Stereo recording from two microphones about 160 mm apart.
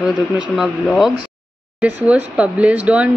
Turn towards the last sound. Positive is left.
turn(degrees=-10)  # may be behind; listen again after turning